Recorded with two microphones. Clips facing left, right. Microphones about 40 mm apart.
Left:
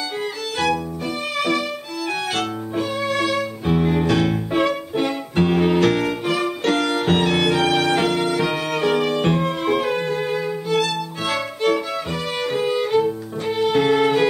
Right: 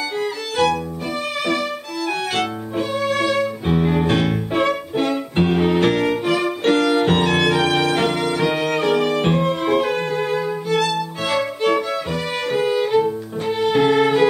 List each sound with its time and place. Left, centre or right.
0.2 s violin: centre
2.0 s music: centre
4.0 s music: right
4.6 s music: centre
7.0 s violin: centre